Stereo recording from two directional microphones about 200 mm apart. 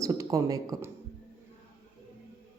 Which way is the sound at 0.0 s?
15° right (ahead or behind).